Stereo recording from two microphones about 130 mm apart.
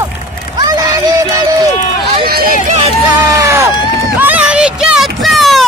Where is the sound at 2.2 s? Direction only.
90° right.